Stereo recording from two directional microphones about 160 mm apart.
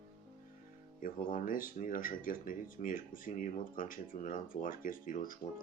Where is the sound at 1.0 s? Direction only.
60° left (ahead or behind).